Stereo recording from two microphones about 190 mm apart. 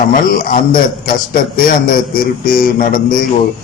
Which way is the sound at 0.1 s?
50° left (ahead or behind).